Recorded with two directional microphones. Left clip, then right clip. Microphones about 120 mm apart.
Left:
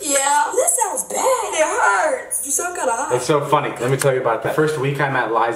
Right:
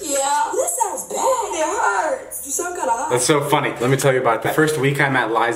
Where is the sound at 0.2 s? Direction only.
30° left (ahead or behind).